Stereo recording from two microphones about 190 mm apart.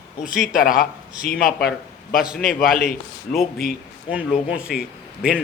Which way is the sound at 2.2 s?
Centre (ahead or behind).